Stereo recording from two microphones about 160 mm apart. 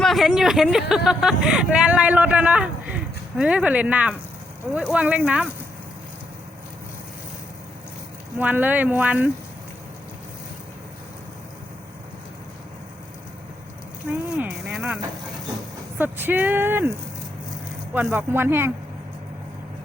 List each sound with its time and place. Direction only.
0.0 s speech: centre (ahead or behind)
8.4 s speech: 10° right (ahead or behind)
14.1 s speech: 10° right (ahead or behind)
16.0 s speech: 10° right (ahead or behind)
17.9 s speech: 10° right (ahead or behind)